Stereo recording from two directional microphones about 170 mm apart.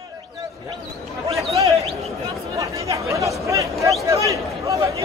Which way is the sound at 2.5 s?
20° right (ahead or behind).